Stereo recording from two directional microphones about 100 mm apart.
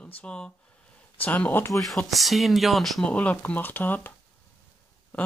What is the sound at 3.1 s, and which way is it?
Speech, 15° left (ahead or behind).